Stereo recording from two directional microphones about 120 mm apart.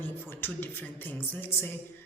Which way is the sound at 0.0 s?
20° left (ahead or behind).